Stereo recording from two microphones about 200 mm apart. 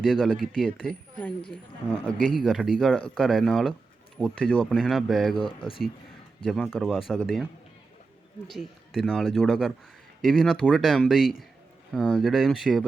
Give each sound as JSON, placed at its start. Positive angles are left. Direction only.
{"t": 0.0, "sound": "speech", "side_deg": 0}
{"t": 2.0, "sound": "speech", "side_deg": 0}
{"t": 5.4, "sound": "speech", "side_deg": 25}
{"t": 6.4, "sound": "speech", "side_deg": 0}
{"t": 8.4, "sound": "speech", "side_deg": 0}